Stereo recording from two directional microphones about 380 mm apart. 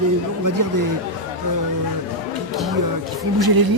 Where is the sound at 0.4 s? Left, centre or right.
Right.